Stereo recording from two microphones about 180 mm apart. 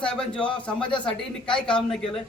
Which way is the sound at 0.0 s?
5° left (ahead or behind).